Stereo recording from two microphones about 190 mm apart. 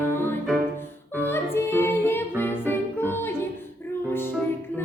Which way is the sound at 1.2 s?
10° left (ahead or behind).